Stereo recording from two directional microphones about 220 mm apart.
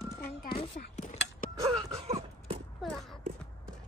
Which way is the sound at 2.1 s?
25° right (ahead or behind).